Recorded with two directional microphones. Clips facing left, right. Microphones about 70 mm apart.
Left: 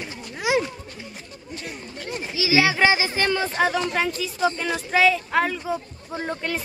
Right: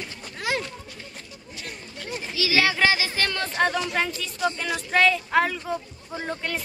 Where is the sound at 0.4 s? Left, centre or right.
Centre.